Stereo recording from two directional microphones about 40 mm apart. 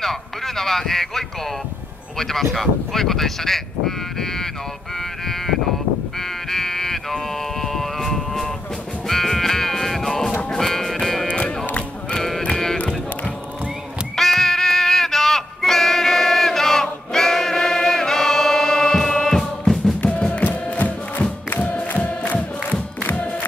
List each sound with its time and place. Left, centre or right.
0.0 s speech: centre
6.1 s music: centre
7.6 s a sound: centre
9.0 s music: centre
11.2 s music: left
12.2 s sheep: centre
14.1 s music: centre
20.7 s music: left